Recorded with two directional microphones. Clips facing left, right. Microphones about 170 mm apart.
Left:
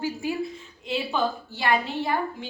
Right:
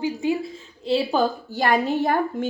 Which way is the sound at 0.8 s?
35° right (ahead or behind).